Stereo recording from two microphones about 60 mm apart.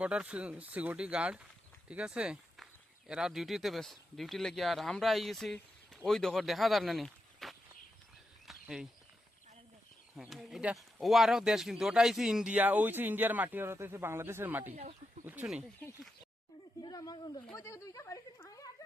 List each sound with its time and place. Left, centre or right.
0.0 s speech: centre
8.6 s speech: centre
10.2 s speech: centre
12.5 s speech: right
13.7 s speech: right
16.8 s a sound: left
17.6 s speech: left